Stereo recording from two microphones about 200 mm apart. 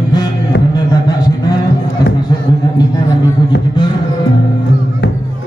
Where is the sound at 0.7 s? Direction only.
20° left (ahead or behind).